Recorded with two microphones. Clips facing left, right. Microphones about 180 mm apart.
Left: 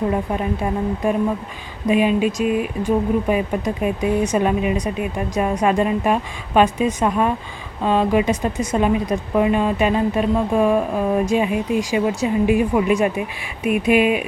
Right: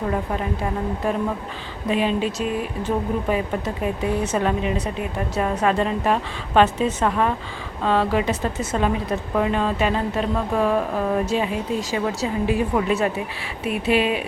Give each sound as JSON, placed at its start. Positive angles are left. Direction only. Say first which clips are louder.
{"t": 1.9, "sound": "speech", "louder": "left 5 dB", "side_deg": 15}